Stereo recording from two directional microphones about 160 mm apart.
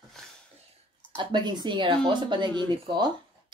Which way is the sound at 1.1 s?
30° right (ahead or behind).